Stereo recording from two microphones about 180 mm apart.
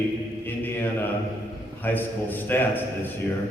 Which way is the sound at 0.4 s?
10° left (ahead or behind).